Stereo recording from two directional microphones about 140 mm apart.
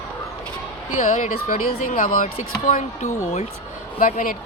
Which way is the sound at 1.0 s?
60° left (ahead or behind).